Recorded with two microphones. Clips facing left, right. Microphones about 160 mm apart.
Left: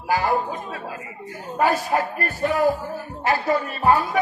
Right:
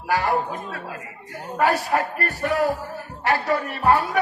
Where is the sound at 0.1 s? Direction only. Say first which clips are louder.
Left 1 dB; 65° right (ahead or behind).